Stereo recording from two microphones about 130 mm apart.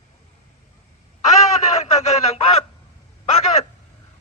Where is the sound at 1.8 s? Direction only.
60° left (ahead or behind).